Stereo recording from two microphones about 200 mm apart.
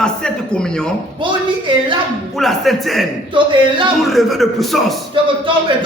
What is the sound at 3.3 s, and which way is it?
Speech, 25° right (ahead or behind).